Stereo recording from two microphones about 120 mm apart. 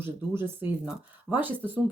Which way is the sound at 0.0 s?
20° right (ahead or behind).